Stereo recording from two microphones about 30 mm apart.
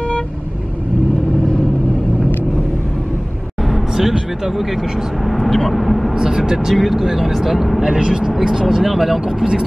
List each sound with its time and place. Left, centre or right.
3.7 s vehicle: centre
5.2 s speech: centre
6.1 s speech: right
6.7 s speech: centre
7.8 s speech: right; by 9.5 s centre